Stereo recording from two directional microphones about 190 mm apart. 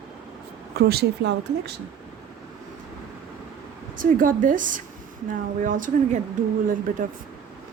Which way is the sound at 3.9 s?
45° right (ahead or behind).